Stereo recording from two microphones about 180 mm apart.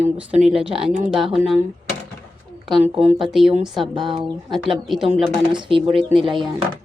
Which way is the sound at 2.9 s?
30° right (ahead or behind).